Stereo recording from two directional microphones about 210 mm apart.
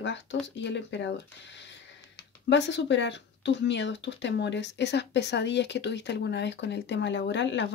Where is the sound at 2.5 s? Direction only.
55° left (ahead or behind).